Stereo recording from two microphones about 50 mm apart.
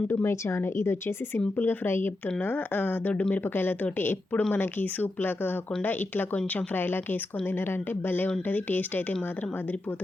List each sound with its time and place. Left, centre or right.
0.1 s a woman's voice: left
3.1 s speech: left
3.5 s speech: left